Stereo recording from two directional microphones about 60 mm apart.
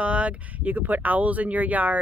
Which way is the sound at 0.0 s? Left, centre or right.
Right.